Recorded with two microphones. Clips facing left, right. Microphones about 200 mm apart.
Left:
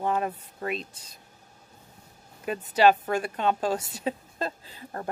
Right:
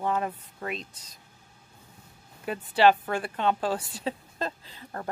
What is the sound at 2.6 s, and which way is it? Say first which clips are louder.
Speech: even; 40° left (ahead or behind).